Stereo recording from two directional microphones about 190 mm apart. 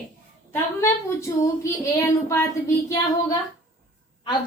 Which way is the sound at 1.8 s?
15° left (ahead or behind).